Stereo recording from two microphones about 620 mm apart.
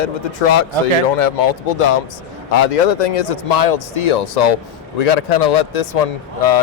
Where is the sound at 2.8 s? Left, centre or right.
Left.